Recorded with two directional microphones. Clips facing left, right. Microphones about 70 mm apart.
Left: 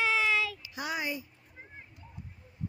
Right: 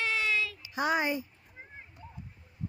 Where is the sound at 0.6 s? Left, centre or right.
Right.